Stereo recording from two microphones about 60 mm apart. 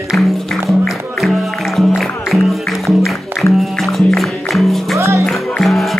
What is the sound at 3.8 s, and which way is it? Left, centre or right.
Music, centre.